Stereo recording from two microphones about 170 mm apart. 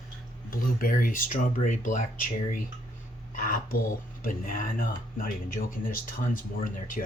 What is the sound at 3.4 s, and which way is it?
Speech, 55° left (ahead or behind).